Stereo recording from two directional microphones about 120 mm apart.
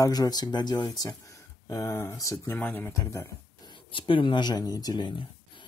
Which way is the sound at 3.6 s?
45° left (ahead or behind).